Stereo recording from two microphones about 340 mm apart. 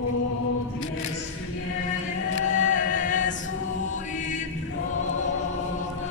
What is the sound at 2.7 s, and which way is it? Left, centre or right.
Music, left.